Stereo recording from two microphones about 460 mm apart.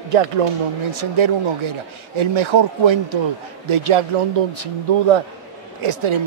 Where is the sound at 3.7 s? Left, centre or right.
Right.